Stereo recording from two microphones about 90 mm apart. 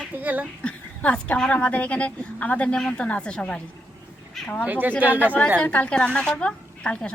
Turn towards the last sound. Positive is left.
turn(degrees=10)  # may be behind; listen again after turning